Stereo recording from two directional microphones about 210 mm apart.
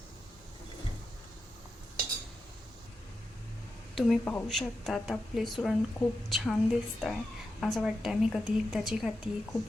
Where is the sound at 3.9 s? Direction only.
Centre (ahead or behind).